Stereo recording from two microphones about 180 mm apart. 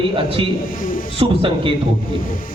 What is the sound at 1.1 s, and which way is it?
Speech, 30° right (ahead or behind).